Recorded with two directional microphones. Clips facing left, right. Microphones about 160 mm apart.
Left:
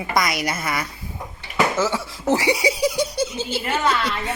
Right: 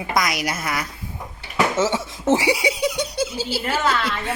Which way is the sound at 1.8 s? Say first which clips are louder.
Right 1 dB; 25° right (ahead or behind).